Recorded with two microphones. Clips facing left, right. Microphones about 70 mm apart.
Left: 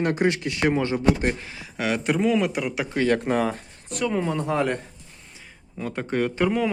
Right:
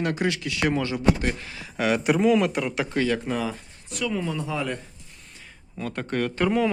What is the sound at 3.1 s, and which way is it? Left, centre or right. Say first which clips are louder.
Speech: left 4 dB; left.